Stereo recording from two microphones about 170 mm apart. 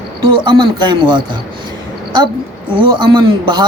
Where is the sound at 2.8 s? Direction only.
25° right (ahead or behind).